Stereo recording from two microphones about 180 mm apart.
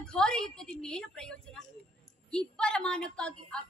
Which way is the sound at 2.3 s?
5° left (ahead or behind).